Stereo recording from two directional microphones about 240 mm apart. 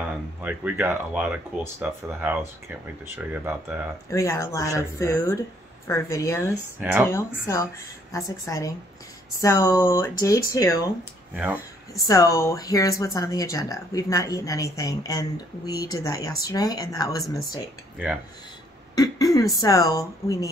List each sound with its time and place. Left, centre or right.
0.0 s speech: centre
4.1 s speech: centre
6.8 s speech: centre
7.1 s speech: centre
12.1 s speech: centre
17.9 s speech: centre
18.9 s speech: centre